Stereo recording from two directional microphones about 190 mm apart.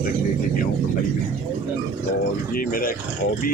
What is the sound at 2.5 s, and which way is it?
Speech, 50° left (ahead or behind).